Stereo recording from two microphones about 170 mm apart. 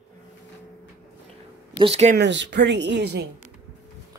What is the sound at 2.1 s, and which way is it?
Speech, 90° right.